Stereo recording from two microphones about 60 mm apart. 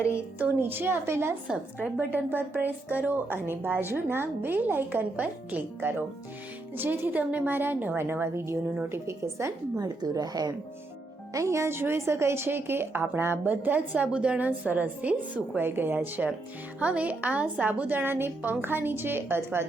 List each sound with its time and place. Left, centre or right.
0.6 s a woman's voice: right
1.5 s a woman's voice: right
9.7 s speech: right
11.3 s a woman's voice: right